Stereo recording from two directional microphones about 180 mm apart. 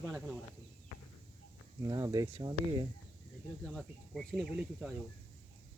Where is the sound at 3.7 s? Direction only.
Centre (ahead or behind).